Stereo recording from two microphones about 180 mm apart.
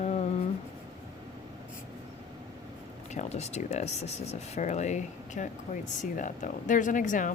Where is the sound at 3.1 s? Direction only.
40° left (ahead or behind).